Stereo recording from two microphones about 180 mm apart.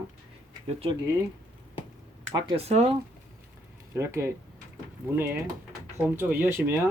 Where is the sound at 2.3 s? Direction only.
30° right (ahead or behind).